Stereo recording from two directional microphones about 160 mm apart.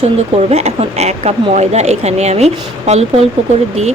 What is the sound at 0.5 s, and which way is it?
Speech, 40° right (ahead or behind).